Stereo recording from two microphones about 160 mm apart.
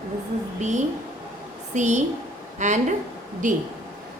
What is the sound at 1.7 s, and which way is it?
A woman's voice, 50° right (ahead or behind).